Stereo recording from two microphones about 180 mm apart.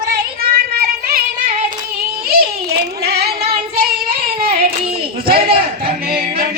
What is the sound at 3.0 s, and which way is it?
Singing, 60° right (ahead or behind).